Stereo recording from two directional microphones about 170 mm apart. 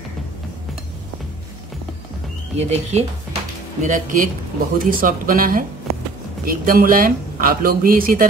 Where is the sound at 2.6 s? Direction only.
40° right (ahead or behind).